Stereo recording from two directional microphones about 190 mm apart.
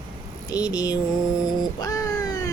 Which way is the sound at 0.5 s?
20° left (ahead or behind).